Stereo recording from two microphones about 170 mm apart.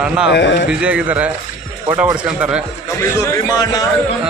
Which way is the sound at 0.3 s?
90° left.